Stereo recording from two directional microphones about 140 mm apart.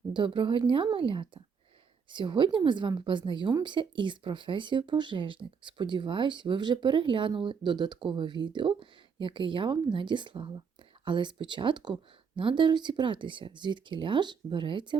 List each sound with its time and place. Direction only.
0.1 s a woman's voice: 35° right (ahead or behind)